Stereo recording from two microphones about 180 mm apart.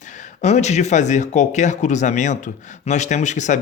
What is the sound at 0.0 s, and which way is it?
Speech, 45° left (ahead or behind).